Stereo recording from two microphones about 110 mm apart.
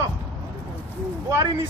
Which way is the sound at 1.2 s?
35° right (ahead or behind).